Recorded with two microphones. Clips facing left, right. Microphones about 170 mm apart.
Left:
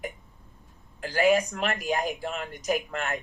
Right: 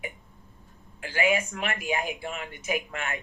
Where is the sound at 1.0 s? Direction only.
40° left (ahead or behind).